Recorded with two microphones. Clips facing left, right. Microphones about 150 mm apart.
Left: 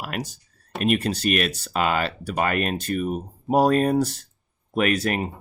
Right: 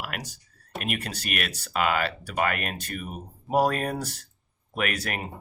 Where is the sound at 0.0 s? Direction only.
25° left (ahead or behind).